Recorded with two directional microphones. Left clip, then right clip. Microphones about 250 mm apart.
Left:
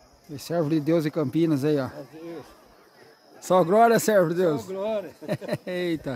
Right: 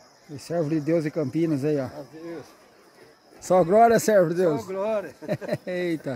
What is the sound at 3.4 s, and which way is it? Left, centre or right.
Speech, centre.